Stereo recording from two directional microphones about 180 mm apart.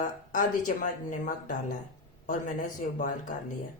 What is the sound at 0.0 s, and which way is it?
A woman's voice, 45° left (ahead or behind).